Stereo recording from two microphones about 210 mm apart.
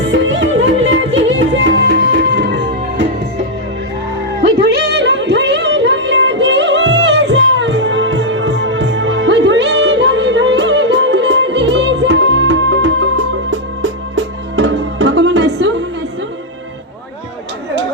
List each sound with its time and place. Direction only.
0.0 s music: 60° right (ahead or behind)
4.4 s music: 50° right (ahead or behind)